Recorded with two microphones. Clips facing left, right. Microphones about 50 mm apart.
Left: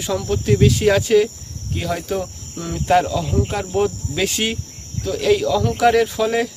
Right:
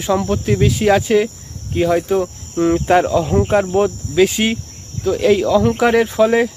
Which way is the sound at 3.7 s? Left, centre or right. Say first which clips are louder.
Right 5 dB; centre.